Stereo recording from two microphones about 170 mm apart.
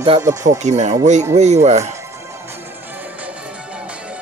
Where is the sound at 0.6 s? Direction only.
45° right (ahead or behind).